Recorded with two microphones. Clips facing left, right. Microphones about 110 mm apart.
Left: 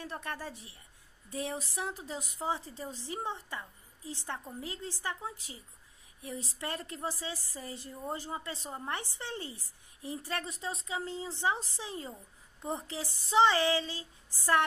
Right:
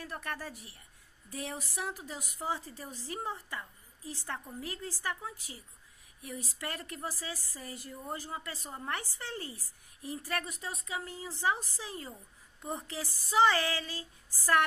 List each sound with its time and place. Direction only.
0.0 s a woman's voice: 25° left (ahead or behind)